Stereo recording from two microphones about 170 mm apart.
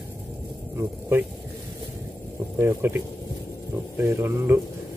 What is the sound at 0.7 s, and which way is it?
Speech, 15° right (ahead or behind).